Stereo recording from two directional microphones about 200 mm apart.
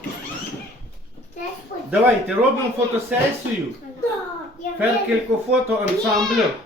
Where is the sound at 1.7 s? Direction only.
40° left (ahead or behind).